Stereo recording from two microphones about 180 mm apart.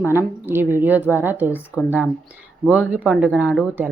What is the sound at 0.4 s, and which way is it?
Speech, 10° right (ahead or behind).